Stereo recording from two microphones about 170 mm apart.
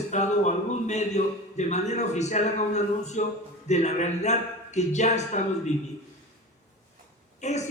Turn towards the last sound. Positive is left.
turn(degrees=45)  # may be behind; listen again after turning